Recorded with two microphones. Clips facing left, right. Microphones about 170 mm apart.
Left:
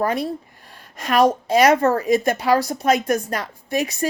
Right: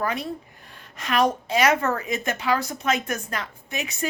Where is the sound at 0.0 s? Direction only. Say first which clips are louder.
Left 6 dB; 40° left (ahead or behind).